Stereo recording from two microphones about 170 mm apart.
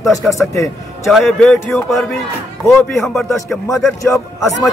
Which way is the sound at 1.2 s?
10° left (ahead or behind).